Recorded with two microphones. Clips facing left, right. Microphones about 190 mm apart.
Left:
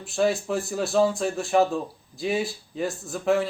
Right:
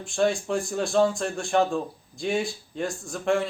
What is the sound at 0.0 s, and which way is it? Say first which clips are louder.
A man's voice: left 1 dB; 5° left (ahead or behind).